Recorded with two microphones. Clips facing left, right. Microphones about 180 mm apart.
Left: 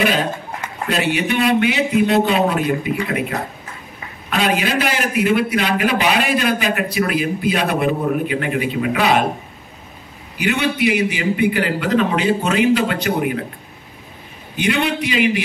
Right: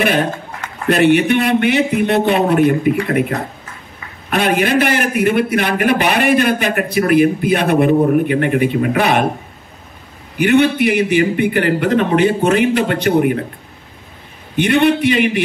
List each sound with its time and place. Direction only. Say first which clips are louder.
0.0 s a man's voice: right 3 dB; 55° right (ahead or behind)
10.3 s a man's voice: right 8 dB; 55° right (ahead or behind)
14.6 s a man's voice: right 7 dB; 55° right (ahead or behind)